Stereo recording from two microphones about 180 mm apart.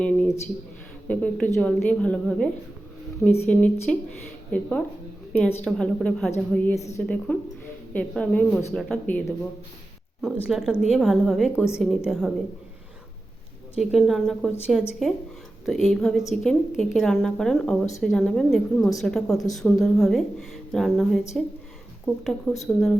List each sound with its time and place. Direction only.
0.0 s a sound: 5° left (ahead or behind)
1.0 s a woman's voice: 5° left (ahead or behind)
10.5 s a woman's voice: 5° right (ahead or behind)
13.7 s a woman's voice: centre (ahead or behind)